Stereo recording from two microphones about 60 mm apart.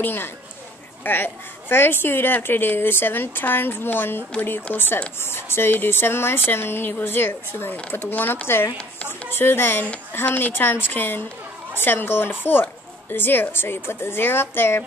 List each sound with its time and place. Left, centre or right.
0.0 s a woman's voice: left